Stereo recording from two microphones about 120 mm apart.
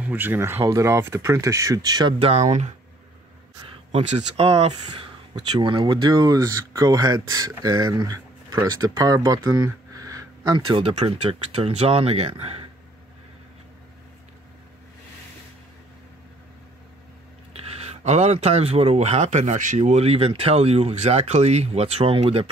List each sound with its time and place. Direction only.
0.0 s speech: 15° right (ahead or behind); by 2.1 s 35° right (ahead or behind)
2.1 s speech: 55° right (ahead or behind)
2.4 s speech: 75° right (ahead or behind)
3.9 s speech: 60° right (ahead or behind)
4.8 s speech: 40° right (ahead or behind)
10.8 s speech: 55° right (ahead or behind)
17.5 s speech: 65° right (ahead or behind)